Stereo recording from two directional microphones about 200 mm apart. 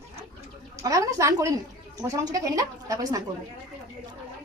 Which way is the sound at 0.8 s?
15° right (ahead or behind).